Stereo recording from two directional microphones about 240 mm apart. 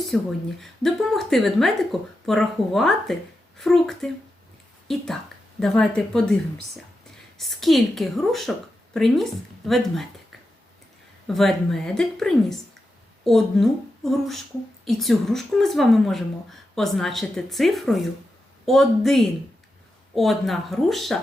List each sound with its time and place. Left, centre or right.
0.1 s a woman's voice: centre
11.3 s a woman's voice: centre